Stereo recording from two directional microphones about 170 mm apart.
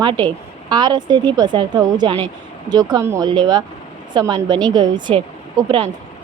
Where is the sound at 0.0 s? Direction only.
25° right (ahead or behind).